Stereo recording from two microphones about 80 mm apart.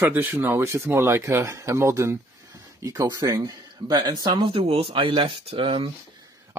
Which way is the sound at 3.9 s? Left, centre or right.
Right.